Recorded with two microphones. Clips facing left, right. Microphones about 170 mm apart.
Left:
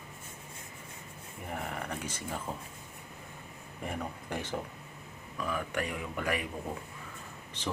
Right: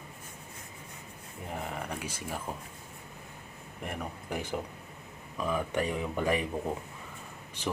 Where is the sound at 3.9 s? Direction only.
10° right (ahead or behind).